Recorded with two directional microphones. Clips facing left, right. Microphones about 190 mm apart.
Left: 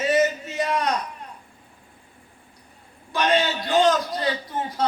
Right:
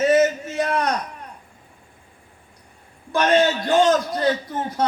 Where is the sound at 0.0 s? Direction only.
50° right (ahead or behind).